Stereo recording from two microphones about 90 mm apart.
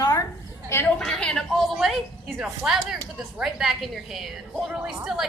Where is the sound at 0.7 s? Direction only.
25° left (ahead or behind).